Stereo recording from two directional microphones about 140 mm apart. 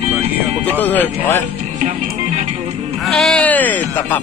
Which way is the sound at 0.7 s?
15° left (ahead or behind).